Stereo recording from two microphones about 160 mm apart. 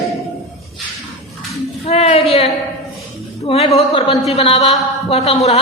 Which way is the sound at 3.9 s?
35° left (ahead or behind).